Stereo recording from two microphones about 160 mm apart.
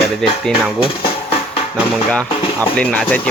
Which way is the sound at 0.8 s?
35° left (ahead or behind).